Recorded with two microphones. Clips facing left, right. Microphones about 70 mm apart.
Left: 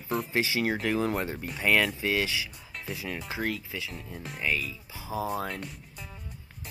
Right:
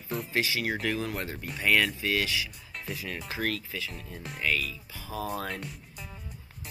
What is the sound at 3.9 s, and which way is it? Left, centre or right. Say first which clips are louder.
Speech: left 1 dB; centre.